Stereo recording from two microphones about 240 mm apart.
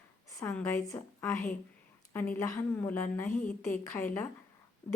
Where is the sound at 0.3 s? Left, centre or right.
Centre.